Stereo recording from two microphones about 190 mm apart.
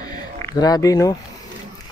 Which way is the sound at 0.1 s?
20° left (ahead or behind).